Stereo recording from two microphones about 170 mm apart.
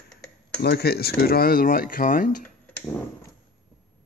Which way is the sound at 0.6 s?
70° left (ahead or behind).